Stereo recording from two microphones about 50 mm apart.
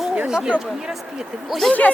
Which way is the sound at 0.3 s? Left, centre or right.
Centre.